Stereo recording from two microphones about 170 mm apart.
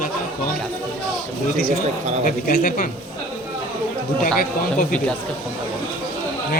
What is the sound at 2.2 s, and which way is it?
Speech, 50° left (ahead or behind).